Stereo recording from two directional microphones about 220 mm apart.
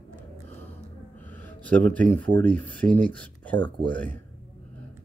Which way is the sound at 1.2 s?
10° left (ahead or behind).